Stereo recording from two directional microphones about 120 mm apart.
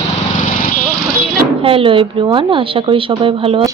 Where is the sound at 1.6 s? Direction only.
45° right (ahead or behind).